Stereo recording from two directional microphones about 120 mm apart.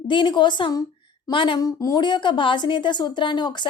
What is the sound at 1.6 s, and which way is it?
Speech, 30° left (ahead or behind).